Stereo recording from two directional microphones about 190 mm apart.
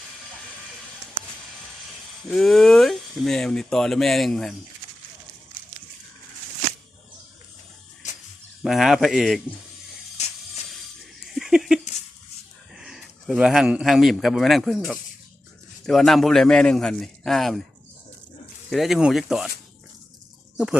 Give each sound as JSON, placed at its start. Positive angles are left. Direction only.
{"t": 2.2, "sound": "speech", "side_deg": 0}
{"t": 8.6, "sound": "speech", "side_deg": 0}
{"t": 11.2, "sound": "a sound", "side_deg": -5}
{"t": 12.7, "sound": "speech", "side_deg": 0}
{"t": 18.7, "sound": "speech", "side_deg": 0}